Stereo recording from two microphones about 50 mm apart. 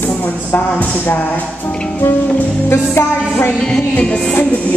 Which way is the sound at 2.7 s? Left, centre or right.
Left.